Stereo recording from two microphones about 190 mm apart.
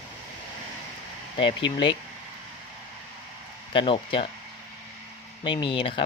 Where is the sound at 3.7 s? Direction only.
30° left (ahead or behind).